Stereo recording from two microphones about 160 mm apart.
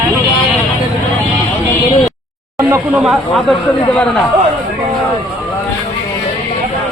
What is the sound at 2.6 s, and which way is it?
Speech, 15° right (ahead or behind).